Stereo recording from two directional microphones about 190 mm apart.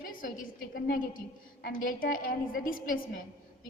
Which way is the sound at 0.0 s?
45° left (ahead or behind).